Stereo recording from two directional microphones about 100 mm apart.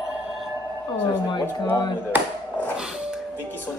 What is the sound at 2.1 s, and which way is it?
Speech, 20° right (ahead or behind).